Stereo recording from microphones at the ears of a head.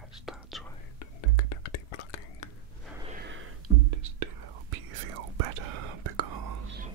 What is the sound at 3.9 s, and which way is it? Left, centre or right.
Whispering, right.